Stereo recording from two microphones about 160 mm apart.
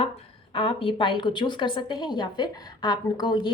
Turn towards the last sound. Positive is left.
turn(degrees=30)  # may be behind; listen again after turning